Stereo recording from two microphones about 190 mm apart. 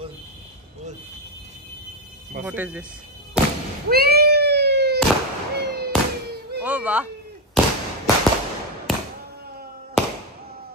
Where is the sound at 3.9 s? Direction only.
55° right (ahead or behind).